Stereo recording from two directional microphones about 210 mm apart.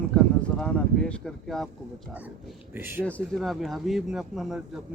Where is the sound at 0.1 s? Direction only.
5° left (ahead or behind).